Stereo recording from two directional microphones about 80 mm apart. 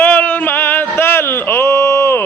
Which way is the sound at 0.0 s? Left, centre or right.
Left.